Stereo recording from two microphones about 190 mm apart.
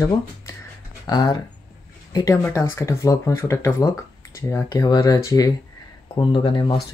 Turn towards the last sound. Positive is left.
turn(degrees=25)  # may be behind; listen again after turning